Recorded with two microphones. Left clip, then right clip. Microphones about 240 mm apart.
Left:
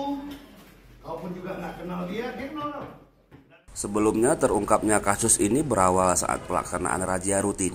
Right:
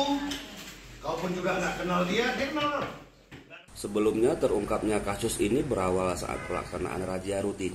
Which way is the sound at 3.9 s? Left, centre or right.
Left.